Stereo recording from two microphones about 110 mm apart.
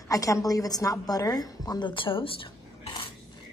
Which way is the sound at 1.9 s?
50° left (ahead or behind).